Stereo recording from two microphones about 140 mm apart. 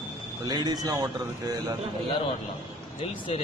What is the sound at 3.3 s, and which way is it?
Speech, 50° left (ahead or behind).